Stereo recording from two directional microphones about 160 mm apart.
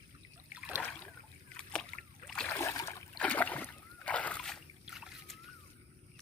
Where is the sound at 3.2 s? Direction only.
10° left (ahead or behind).